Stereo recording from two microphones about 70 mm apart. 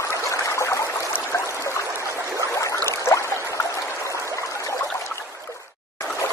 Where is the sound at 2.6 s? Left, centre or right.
Left.